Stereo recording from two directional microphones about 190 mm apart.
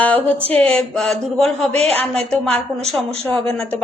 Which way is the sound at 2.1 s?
Centre (ahead or behind).